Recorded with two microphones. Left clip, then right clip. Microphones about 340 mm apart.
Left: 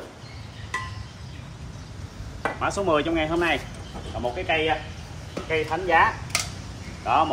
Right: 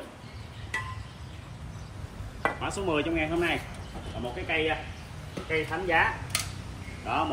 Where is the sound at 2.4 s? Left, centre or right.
Centre.